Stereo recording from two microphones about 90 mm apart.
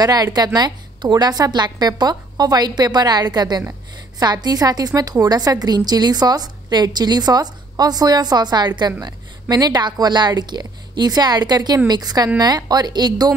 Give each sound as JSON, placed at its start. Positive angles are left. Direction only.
{"t": 0.0, "sound": "a woman's voice", "side_deg": -50}